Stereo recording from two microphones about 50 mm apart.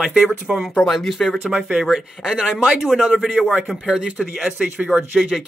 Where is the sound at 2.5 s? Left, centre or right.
Centre.